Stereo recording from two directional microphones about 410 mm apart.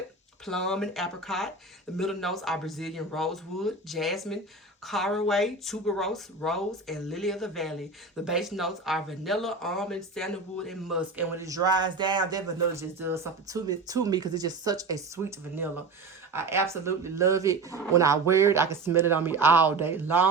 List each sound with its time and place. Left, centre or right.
0.4 s speech: centre